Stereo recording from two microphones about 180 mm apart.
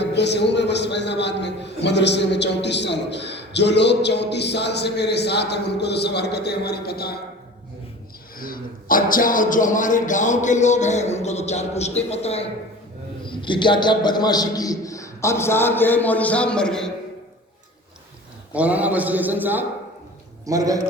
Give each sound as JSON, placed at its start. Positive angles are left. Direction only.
{"t": 0.0, "sound": "a man's voice", "side_deg": 70}
{"t": 8.4, "sound": "a man's voice", "side_deg": 55}
{"t": 18.5, "sound": "a man's voice", "side_deg": -10}